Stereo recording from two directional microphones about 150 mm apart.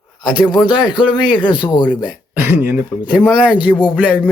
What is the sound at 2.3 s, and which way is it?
Speech, 15° right (ahead or behind).